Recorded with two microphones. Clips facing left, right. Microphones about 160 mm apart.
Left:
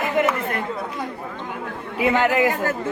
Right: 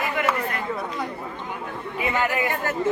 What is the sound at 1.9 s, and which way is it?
Speech, 80° left.